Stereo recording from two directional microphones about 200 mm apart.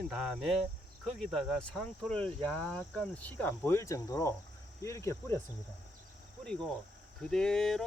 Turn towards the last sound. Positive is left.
turn(degrees=0)  # may be behind; listen again after turning